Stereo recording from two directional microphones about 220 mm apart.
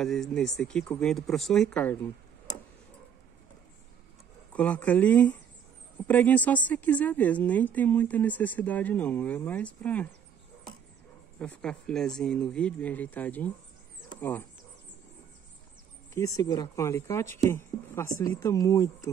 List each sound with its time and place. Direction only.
0.0 s speech: centre (ahead or behind)
4.5 s a woman's voice: 5° left (ahead or behind)
11.3 s speech: 5° left (ahead or behind)
16.1 s a woman's voice: 15° left (ahead or behind)